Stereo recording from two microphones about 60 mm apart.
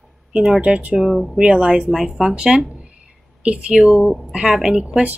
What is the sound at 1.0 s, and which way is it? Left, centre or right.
Speech, centre.